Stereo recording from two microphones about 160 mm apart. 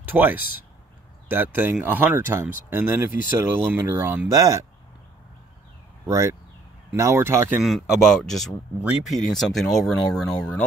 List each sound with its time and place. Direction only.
0.0 s speech: 10° right (ahead or behind)
6.0 s speech: 20° right (ahead or behind)
7.6 s speech: centre (ahead or behind)